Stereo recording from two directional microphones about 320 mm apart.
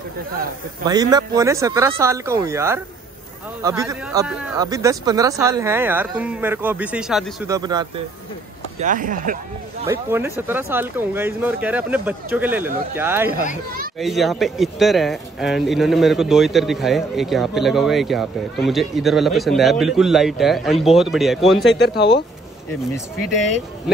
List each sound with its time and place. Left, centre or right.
0.8 s a man's voice: centre
8.7 s speech: right
9.8 s a man's voice: centre